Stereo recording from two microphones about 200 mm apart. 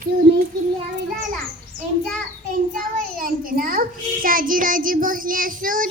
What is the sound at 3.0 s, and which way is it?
Child singing, 45° right (ahead or behind).